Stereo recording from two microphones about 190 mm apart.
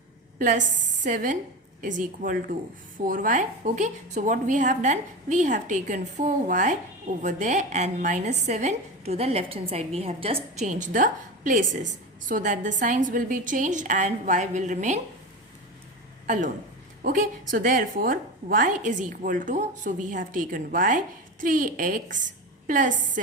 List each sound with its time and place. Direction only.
0.3 s a woman's voice: 40° right (ahead or behind)
16.2 s a woman's voice: 40° right (ahead or behind)